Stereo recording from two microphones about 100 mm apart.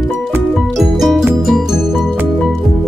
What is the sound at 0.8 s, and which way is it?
Music, centre (ahead or behind).